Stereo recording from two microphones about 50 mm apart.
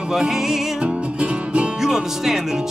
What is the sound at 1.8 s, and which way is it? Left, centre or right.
Music, centre.